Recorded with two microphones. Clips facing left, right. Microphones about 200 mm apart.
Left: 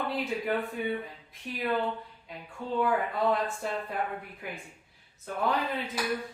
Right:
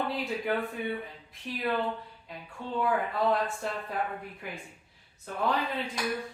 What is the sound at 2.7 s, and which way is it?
Speech, centre (ahead or behind).